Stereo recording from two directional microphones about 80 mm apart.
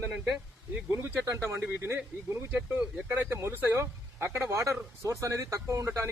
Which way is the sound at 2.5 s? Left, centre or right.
Right.